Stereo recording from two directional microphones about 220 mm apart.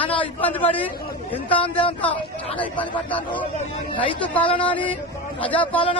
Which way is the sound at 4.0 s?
5° left (ahead or behind).